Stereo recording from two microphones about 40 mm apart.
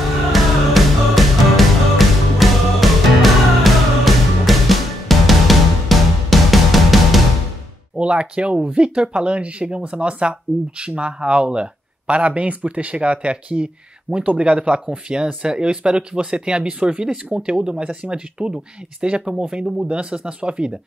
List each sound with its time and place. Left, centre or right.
0.3 s music: centre
8.0 s speech: right
15.4 s speech: right